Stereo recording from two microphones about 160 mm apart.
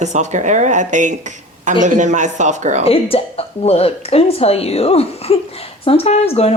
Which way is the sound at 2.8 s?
35° left (ahead or behind).